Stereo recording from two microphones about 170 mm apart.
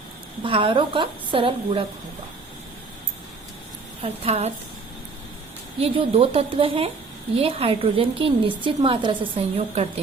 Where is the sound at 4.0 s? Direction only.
35° right (ahead or behind).